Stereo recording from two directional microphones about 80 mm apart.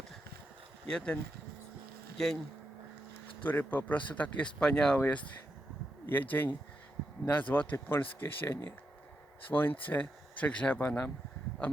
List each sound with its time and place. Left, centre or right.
0.9 s speech: centre
2.1 s speech: centre
3.4 s speech: left
4.9 s speech: left